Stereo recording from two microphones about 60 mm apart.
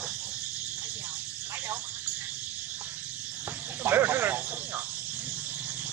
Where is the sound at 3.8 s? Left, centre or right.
Right.